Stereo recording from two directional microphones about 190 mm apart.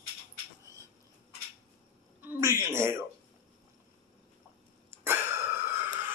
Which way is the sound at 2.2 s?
10° right (ahead or behind).